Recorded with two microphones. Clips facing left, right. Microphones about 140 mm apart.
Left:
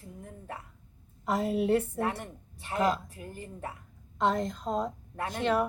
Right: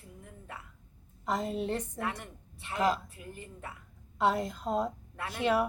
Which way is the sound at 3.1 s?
35° left (ahead or behind).